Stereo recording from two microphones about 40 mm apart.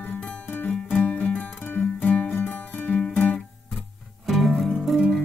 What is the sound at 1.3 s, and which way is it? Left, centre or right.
Music, left.